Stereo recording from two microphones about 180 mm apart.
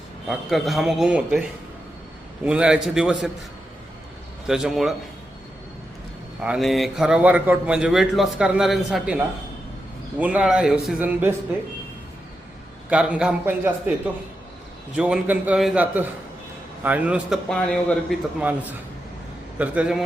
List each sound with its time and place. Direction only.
0.3 s a man's voice: centre (ahead or behind)
2.4 s a man's voice: 5° right (ahead or behind)
4.4 s a man's voice: 5° right (ahead or behind)
6.4 s a man's voice: 5° right (ahead or behind)
12.9 s a man's voice: 5° right (ahead or behind)
14.9 s a man's voice: 5° right (ahead or behind)